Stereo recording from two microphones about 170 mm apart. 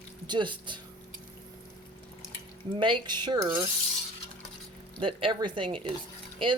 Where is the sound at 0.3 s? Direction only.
30° right (ahead or behind).